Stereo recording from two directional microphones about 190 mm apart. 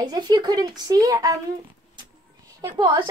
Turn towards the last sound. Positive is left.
turn(degrees=-25)  # may be behind; listen again after turning